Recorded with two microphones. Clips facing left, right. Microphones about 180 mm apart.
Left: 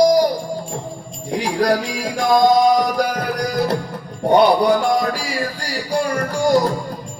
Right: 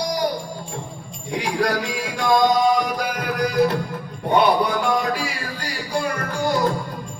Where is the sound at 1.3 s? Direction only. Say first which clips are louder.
Left 4 dB; 40° left (ahead or behind).